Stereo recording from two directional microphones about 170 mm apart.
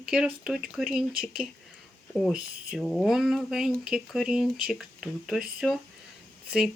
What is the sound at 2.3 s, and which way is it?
Speech, 60° right (ahead or behind).